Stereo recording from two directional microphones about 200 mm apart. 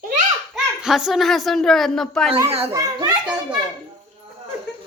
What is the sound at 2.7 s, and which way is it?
Speech, 20° right (ahead or behind).